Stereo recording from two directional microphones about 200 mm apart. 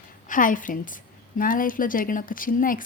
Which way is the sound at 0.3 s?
40° left (ahead or behind).